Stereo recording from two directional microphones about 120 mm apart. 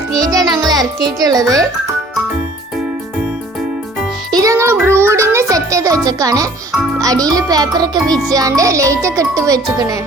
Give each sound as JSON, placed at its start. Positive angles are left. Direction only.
{"t": 0.2, "sound": "music", "side_deg": -30}
{"t": 1.2, "sound": "speech", "side_deg": -30}
{"t": 4.3, "sound": "music", "side_deg": -30}
{"t": 7.0, "sound": "a child's voice", "side_deg": -30}